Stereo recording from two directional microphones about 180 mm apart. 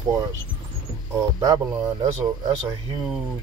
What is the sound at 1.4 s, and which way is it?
Speech, 20° right (ahead or behind).